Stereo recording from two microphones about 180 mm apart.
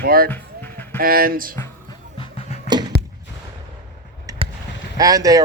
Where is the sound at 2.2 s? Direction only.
30° left (ahead or behind).